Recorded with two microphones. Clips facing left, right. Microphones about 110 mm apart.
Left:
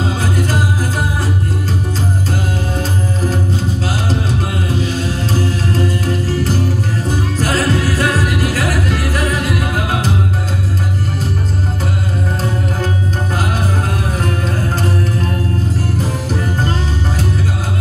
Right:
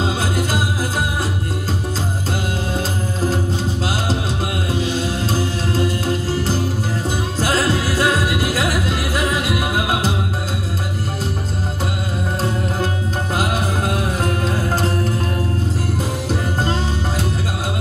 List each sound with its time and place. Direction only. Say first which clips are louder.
7.3 s music: left 1 dB; 30° right (ahead or behind)